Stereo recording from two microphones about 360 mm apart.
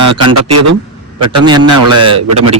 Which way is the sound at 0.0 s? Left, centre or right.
Right.